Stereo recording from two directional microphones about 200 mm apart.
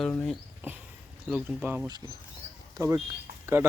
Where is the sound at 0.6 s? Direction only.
10° right (ahead or behind).